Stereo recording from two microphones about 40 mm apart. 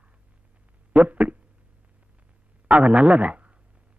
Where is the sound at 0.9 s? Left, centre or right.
Right.